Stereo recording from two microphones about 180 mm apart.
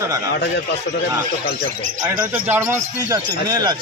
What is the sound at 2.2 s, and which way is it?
Speech, 10° right (ahead or behind).